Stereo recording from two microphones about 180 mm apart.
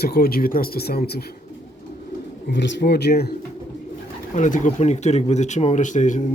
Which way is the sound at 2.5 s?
80° left.